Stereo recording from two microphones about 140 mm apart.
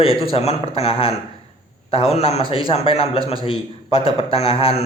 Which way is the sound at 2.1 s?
50° left (ahead or behind).